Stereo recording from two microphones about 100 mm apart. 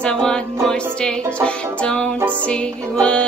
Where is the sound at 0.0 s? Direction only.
10° left (ahead or behind).